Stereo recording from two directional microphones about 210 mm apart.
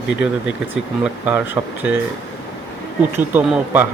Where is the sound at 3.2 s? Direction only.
10° right (ahead or behind).